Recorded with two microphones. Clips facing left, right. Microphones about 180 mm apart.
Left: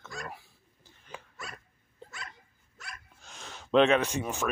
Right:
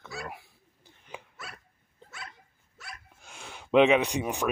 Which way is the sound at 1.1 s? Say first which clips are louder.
Right 2 dB; 15° right (ahead or behind).